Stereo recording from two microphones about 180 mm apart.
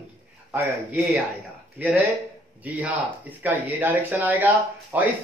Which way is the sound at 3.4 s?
10° right (ahead or behind).